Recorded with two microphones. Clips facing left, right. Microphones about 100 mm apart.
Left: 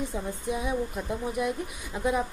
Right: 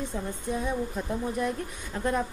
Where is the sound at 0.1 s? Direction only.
5° left (ahead or behind).